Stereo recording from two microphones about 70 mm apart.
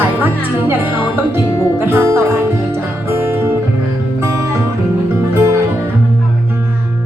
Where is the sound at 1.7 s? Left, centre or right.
Right.